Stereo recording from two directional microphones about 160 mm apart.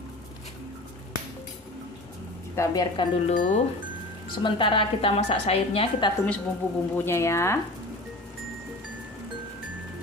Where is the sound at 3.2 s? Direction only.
50° left (ahead or behind).